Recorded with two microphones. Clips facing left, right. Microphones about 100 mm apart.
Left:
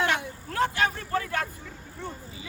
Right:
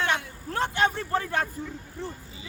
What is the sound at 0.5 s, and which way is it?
Speech, 30° right (ahead or behind).